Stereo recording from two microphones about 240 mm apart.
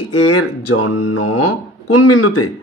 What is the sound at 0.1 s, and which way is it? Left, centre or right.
A man's voice, left.